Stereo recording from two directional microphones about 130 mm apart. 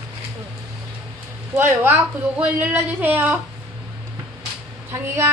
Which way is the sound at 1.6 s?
15° right (ahead or behind).